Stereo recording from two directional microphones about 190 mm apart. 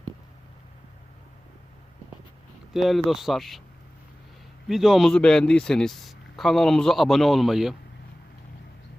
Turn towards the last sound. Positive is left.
turn(degrees=0)  # may be behind; listen again after turning